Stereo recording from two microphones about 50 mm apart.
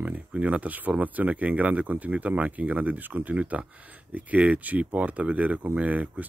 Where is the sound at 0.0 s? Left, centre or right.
Right.